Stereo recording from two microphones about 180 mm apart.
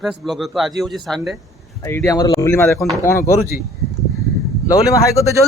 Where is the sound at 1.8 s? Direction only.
15° left (ahead or behind).